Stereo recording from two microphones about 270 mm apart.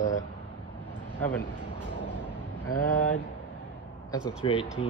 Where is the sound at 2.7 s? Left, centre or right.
Left.